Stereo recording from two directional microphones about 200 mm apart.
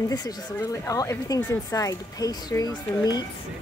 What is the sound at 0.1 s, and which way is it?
Speech, 20° left (ahead or behind).